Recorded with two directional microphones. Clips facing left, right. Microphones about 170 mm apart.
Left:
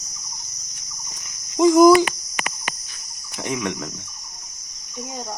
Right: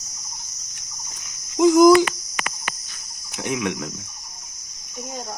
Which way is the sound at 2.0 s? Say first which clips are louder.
Left 1 dB; 15° left (ahead or behind).